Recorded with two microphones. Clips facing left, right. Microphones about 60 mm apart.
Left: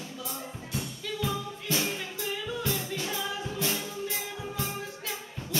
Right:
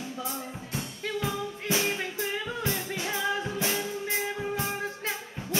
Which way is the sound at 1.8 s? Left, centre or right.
Right.